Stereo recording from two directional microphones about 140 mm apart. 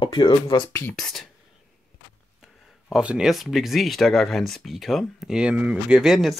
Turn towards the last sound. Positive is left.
turn(degrees=0)  # may be behind; listen again after turning